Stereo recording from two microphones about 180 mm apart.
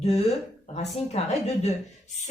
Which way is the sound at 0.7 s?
35° left (ahead or behind).